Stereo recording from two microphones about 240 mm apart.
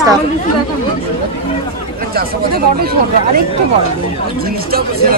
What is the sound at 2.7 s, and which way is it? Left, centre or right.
Speech, right.